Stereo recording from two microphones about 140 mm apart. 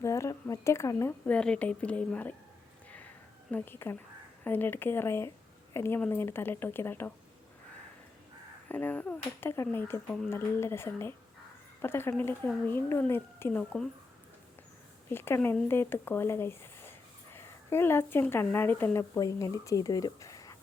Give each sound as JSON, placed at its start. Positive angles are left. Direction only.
{"t": 0.0, "sound": "a sound", "side_deg": 20}
{"t": 1.3, "sound": "speech", "side_deg": 10}
{"t": 3.5, "sound": "speech", "side_deg": 15}
{"t": 8.7, "sound": "speech", "side_deg": 15}
{"t": 15.1, "sound": "speech", "side_deg": 15}